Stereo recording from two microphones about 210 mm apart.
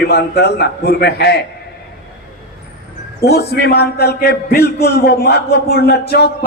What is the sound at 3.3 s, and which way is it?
A man's voice, 50° left (ahead or behind).